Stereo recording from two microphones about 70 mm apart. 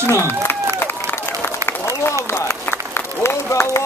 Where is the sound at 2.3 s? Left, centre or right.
Left.